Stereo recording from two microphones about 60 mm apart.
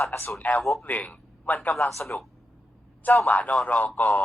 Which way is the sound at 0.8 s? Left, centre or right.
Left.